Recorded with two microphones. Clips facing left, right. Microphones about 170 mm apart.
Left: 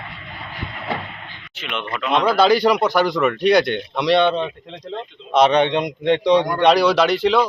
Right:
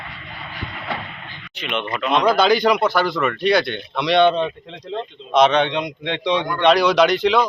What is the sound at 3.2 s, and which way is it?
Speech, 5° left (ahead or behind).